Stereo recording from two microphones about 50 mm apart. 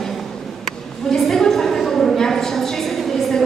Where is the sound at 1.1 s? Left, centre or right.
Centre.